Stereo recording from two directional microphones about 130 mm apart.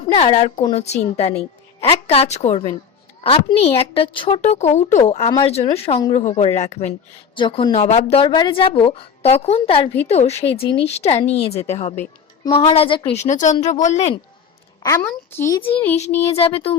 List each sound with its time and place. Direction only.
0.0 s a woman's voice: 45° left (ahead or behind)
4.4 s speech: 60° left (ahead or behind)
5.4 s a woman's voice: 50° left (ahead or behind)
6.1 s speech: 65° left (ahead or behind)
7.3 s speech: 40° left (ahead or behind)
7.7 s speech: 65° left (ahead or behind)
7.9 s a woman's voice: 40° left (ahead or behind); by 11.9 s 60° left (ahead or behind)
12.5 s a woman's voice: 45° left (ahead or behind)
13.2 s speech: 75° left (ahead or behind)
15.3 s a child's voice: 15° left (ahead or behind)
16.3 s a woman's voice: 45° left (ahead or behind)